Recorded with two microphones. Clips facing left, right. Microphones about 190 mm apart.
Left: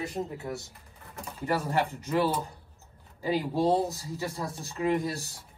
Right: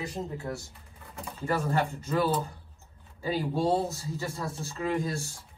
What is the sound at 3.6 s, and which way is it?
Speech, 15° left (ahead or behind).